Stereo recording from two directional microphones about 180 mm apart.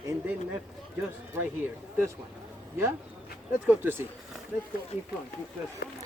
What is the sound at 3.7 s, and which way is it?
Speech, 10° right (ahead or behind).